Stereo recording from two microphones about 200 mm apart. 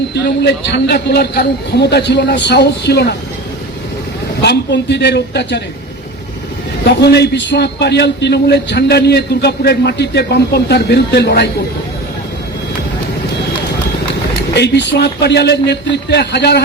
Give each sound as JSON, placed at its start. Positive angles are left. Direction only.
{"t": 0.1, "sound": "a man's voice", "side_deg": 55}
{"t": 4.4, "sound": "a man's voice", "side_deg": 60}
{"t": 7.0, "sound": "a man's voice", "side_deg": 55}
{"t": 14.5, "sound": "a man's voice", "side_deg": 60}